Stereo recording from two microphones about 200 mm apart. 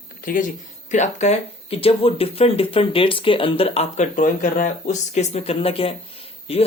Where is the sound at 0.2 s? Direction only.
45° left (ahead or behind).